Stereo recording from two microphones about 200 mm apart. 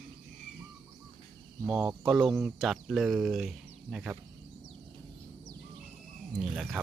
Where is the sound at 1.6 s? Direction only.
5° right (ahead or behind).